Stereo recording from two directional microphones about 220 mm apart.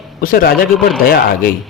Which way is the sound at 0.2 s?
40° left (ahead or behind).